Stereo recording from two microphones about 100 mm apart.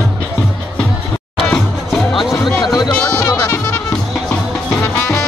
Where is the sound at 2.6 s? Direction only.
40° left (ahead or behind).